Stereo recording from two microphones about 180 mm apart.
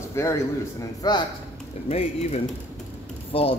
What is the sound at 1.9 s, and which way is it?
Speech, 35° left (ahead or behind).